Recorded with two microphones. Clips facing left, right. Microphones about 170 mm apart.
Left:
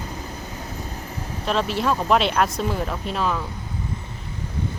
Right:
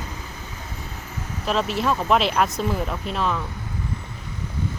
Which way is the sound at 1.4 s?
Centre (ahead or behind).